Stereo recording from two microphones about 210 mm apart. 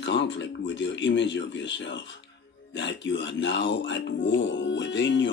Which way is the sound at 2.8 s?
60° left (ahead or behind).